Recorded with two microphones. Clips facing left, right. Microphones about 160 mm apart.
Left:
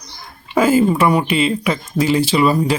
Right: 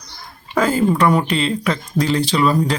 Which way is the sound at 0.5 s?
5° left (ahead or behind).